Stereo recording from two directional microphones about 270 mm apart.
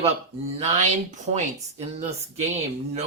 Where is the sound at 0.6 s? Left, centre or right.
Right.